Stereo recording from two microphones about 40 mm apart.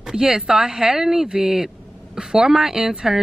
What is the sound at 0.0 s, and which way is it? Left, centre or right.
Speech, centre.